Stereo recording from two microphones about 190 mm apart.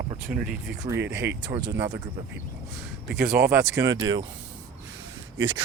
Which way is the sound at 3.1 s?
55° right (ahead or behind).